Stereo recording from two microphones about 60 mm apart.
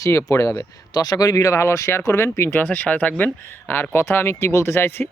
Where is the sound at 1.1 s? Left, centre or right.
Left.